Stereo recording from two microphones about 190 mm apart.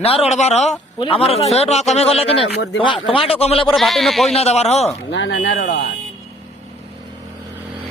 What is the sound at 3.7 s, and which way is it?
Speech, centre (ahead or behind).